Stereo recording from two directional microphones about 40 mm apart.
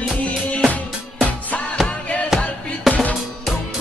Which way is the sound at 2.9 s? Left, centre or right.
Centre.